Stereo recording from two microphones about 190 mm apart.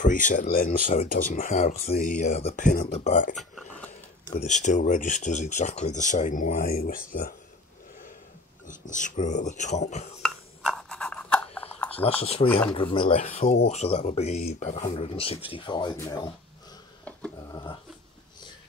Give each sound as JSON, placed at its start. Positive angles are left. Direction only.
{"t": 0.0, "sound": "speech", "side_deg": 45}
{"t": 3.3, "sound": "a sound", "side_deg": 0}
{"t": 4.3, "sound": "speech", "side_deg": 40}
{"t": 8.6, "sound": "speech", "side_deg": 40}
{"t": 10.2, "sound": "a sound", "side_deg": 0}
{"t": 12.0, "sound": "speech", "side_deg": 30}
{"t": 12.4, "sound": "speech", "side_deg": 5}
{"t": 12.7, "sound": "speech", "side_deg": 25}
{"t": 17.5, "sound": "a sound", "side_deg": 20}